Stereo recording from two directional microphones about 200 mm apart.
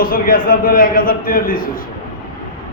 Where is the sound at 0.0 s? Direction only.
45° left (ahead or behind).